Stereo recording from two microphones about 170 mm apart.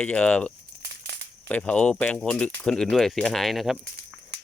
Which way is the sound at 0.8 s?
85° right.